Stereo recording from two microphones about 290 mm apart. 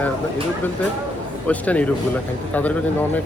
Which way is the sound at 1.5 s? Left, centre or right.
Centre.